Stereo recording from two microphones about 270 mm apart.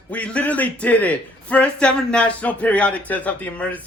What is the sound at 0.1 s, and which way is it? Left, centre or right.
A man's voice, centre.